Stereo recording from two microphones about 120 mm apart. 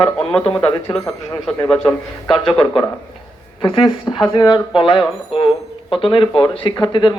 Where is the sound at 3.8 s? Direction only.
30° left (ahead or behind).